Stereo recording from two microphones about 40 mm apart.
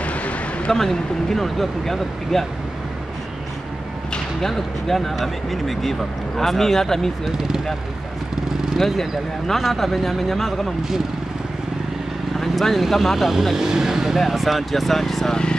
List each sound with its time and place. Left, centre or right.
0.0 s a sound: left
0.7 s speech: centre
4.4 s speech: centre
7.2 s speech: centre
8.7 s speech: centre
12.4 s speech: centre